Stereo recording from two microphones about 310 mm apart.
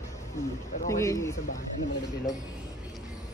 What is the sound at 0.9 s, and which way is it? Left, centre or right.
Speech, centre.